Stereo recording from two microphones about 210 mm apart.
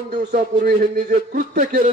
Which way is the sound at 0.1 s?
40° right (ahead or behind).